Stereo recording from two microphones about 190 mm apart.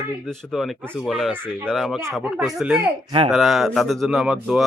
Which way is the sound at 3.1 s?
30° right (ahead or behind).